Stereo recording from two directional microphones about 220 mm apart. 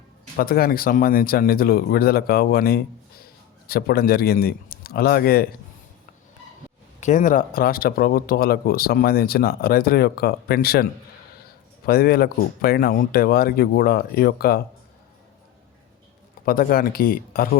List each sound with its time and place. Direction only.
0.3 s speech: 40° left (ahead or behind)
7.0 s speech: 35° left (ahead or behind)
11.9 s speech: 45° left (ahead or behind)
16.5 s speech: 40° left (ahead or behind)